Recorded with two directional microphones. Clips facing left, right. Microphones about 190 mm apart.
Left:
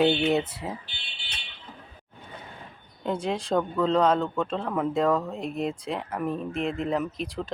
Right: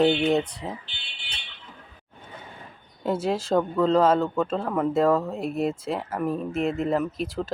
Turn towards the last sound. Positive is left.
turn(degrees=0)  # may be behind; listen again after turning